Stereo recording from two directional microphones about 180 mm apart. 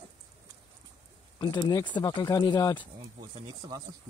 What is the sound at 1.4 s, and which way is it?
Speech, 25° left (ahead or behind).